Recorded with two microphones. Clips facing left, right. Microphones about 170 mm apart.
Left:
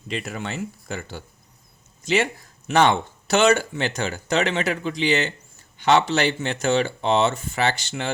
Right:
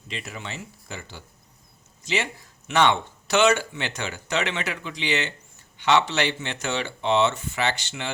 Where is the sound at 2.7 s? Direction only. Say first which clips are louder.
Left 3 dB; 40° left (ahead or behind).